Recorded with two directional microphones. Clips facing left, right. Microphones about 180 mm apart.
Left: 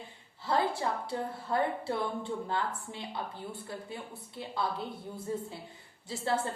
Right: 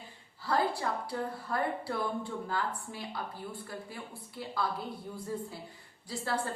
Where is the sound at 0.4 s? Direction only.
25° left (ahead or behind).